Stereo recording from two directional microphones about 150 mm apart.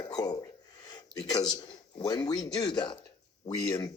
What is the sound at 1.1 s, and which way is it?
A man's voice, 25° left (ahead or behind).